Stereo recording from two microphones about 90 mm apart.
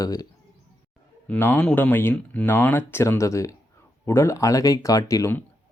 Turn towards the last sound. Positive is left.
turn(degrees=35)  # may be behind; listen again after turning